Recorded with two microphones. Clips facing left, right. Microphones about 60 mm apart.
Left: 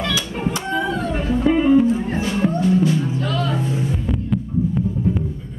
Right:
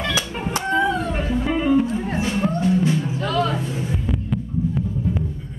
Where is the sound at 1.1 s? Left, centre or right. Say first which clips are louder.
Left 4 dB; centre.